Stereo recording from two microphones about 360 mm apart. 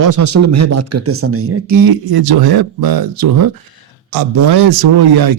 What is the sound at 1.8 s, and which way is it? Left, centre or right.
Speech, right.